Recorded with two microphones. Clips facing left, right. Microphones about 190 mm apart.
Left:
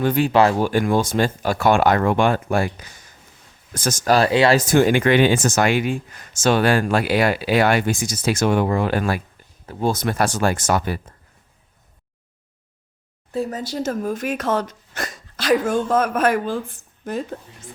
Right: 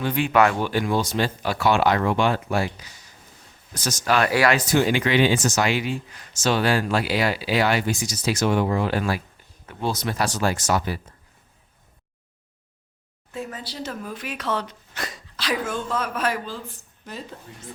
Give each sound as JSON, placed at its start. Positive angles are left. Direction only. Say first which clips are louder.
{"t": 0.0, "sound": "speech", "louder": "left 3 dB", "side_deg": 40}
{"t": 0.7, "sound": "speech", "louder": "left 4 dB", "side_deg": 50}
{"t": 4.3, "sound": "speech", "louder": "left 2 dB", "side_deg": 25}
{"t": 4.5, "sound": "speech", "louder": "left 5 dB", "side_deg": 50}
{"t": 13.3, "sound": "speech", "louder": "left 8 dB", "side_deg": 40}